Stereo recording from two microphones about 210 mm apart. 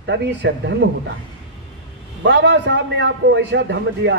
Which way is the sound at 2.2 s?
55° right (ahead or behind).